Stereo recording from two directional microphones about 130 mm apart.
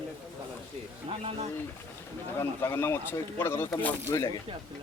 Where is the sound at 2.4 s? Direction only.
20° left (ahead or behind).